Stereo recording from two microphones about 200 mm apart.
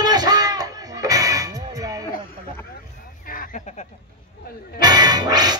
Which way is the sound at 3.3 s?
40° left (ahead or behind).